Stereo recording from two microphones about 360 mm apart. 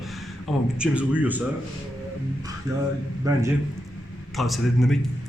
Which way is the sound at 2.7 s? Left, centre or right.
Centre.